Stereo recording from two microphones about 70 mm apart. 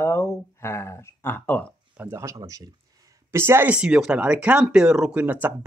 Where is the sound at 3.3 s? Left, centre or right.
Right.